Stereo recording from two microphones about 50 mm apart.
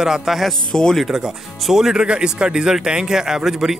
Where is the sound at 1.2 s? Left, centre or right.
Centre.